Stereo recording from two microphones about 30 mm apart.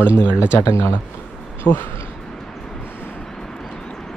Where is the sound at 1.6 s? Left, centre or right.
Left.